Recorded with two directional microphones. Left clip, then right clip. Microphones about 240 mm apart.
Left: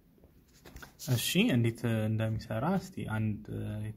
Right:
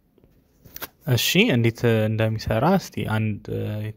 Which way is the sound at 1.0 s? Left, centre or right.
Right.